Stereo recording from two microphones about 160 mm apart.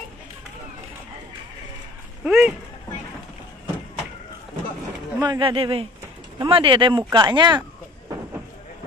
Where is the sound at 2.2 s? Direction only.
5° right (ahead or behind).